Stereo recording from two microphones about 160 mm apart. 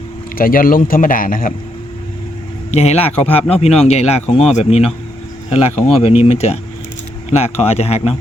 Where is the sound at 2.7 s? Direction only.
40° left (ahead or behind).